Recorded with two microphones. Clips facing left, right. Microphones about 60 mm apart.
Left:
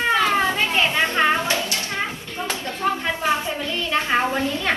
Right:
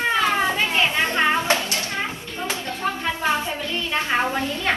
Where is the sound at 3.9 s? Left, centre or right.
Left.